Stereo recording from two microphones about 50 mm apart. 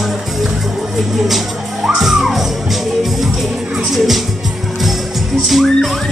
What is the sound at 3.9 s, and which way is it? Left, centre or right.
Music, centre.